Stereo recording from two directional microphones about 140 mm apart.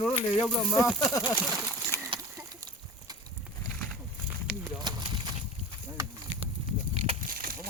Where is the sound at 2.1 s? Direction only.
35° right (ahead or behind).